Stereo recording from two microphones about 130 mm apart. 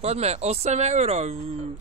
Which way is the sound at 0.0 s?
55° right (ahead or behind).